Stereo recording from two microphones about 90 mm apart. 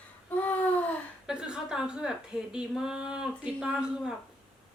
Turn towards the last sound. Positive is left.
turn(degrees=-10)  # may be behind; listen again after turning